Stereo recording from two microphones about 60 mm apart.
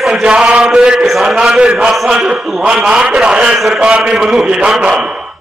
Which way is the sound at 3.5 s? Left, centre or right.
Centre.